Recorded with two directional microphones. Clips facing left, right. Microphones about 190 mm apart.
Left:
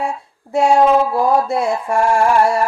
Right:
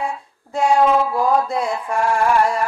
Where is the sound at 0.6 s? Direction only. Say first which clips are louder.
Left 3 dB; 25° left (ahead or behind).